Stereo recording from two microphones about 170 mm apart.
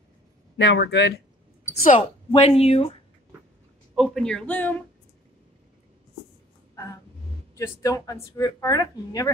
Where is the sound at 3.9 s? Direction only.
Centre (ahead or behind).